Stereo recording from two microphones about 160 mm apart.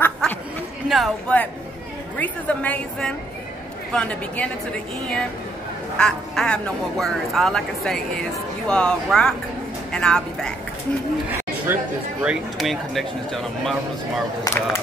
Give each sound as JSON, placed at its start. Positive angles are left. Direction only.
{"t": 0.0, "sound": "chatter", "side_deg": 10}
{"t": 0.8, "sound": "speech", "side_deg": 0}
{"t": 2.1, "sound": "a woman's voice", "side_deg": 10}
{"t": 5.9, "sound": "speech", "side_deg": 5}
{"t": 11.6, "sound": "speech", "side_deg": -10}
{"t": 12.5, "sound": "speech", "side_deg": 0}
{"t": 14.4, "sound": "a woman's voice", "side_deg": 15}